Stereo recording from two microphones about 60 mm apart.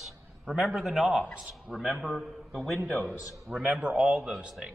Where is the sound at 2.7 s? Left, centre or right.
Centre.